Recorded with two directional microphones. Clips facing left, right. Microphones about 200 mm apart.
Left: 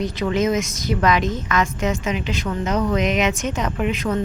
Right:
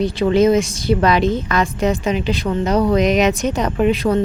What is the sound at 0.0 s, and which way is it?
A woman's voice, 30° right (ahead or behind).